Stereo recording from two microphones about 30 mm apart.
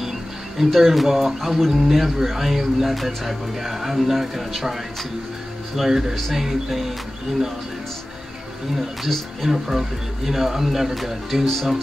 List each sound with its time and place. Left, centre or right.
0.6 s speech: centre
5.9 s speech: centre
6.3 s speech: centre
9.4 s speech: centre
11.4 s speech: centre